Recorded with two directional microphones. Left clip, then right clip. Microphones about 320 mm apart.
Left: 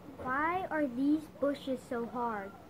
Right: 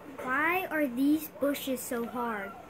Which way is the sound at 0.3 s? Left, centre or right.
Right.